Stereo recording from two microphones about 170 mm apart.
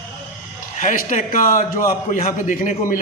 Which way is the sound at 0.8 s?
50° left (ahead or behind).